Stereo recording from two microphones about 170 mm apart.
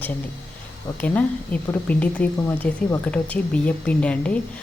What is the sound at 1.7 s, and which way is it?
Speech, 10° left (ahead or behind).